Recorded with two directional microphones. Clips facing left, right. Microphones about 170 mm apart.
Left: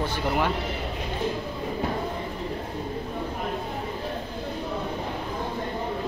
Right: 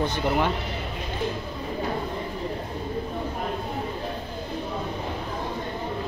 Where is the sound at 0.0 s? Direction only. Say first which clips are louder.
Right 2 dB; 10° left (ahead or behind).